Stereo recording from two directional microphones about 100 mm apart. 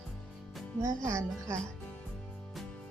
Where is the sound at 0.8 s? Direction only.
30° right (ahead or behind).